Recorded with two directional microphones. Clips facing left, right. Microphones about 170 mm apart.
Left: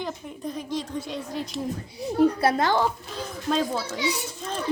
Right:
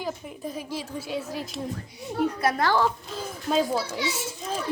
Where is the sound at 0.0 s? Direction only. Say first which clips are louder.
Even; 5° right (ahead or behind).